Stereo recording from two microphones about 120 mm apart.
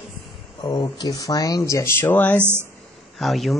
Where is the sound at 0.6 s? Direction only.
40° left (ahead or behind); by 2.4 s 15° left (ahead or behind).